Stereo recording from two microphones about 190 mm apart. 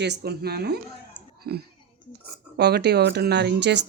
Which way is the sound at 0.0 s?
60° right (ahead or behind).